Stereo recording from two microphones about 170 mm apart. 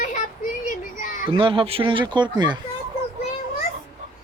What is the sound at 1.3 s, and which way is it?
Speech, 30° right (ahead or behind).